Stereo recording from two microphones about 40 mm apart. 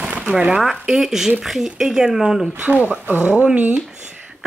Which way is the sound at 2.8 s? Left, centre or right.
Right.